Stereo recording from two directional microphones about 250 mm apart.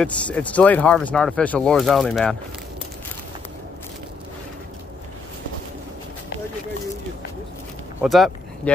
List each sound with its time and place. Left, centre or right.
0.0 s speech: centre
8.0 s speech: centre